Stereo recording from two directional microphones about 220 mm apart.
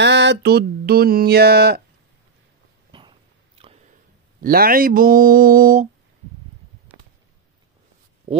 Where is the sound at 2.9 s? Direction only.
25° right (ahead or behind).